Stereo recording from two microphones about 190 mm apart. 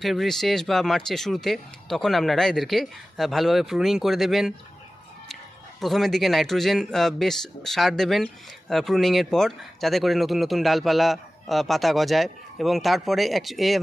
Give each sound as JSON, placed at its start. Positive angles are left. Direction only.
{"t": 0.0, "sound": "a man's voice", "side_deg": 0}